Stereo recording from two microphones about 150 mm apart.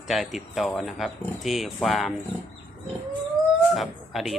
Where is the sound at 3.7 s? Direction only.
Centre (ahead or behind).